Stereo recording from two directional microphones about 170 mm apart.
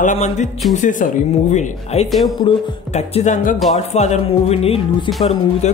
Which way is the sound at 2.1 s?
Centre (ahead or behind).